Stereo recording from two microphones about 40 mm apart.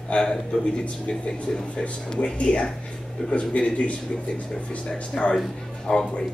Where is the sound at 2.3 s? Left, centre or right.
Left.